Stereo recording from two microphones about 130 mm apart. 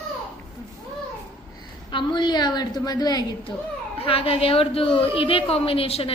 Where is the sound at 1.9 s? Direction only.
35° left (ahead or behind).